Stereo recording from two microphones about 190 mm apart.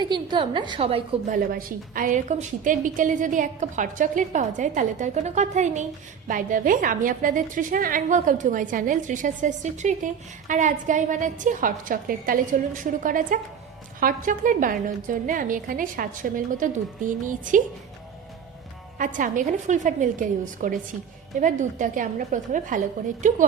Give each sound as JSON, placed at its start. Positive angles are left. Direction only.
{"t": 0.0, "sound": "a woman's voice", "side_deg": -25}
{"t": 1.5, "sound": "a woman's voice", "side_deg": -50}
{"t": 18.9, "sound": "a woman's voice", "side_deg": -45}